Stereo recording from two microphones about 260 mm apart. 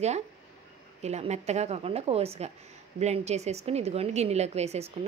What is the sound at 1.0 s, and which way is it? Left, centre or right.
A woman's voice, right.